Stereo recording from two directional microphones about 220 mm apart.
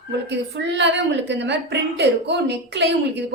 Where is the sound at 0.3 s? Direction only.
50° right (ahead or behind).